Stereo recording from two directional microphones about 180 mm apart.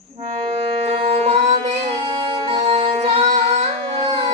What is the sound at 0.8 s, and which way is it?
Music, 35° right (ahead or behind).